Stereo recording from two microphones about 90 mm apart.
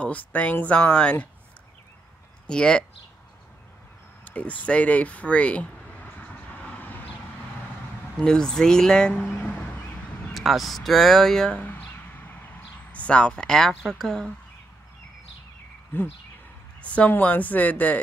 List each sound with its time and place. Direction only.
0.0 s speech: 15° left (ahead or behind)
2.4 s speech: 10° left (ahead or behind)
4.2 s a sound: 15° left (ahead or behind)
8.2 s speech: 10° left (ahead or behind)
10.3 s speech: centre (ahead or behind)
15.9 s a sound: 25° left (ahead or behind)
16.8 s a woman's voice: 15° left (ahead or behind)